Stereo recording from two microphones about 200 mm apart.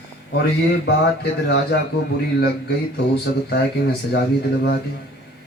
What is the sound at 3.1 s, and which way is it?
Speech, 55° left (ahead or behind).